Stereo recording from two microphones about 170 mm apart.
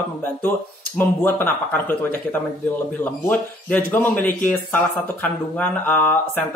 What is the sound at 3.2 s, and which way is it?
Speech, 10° left (ahead or behind).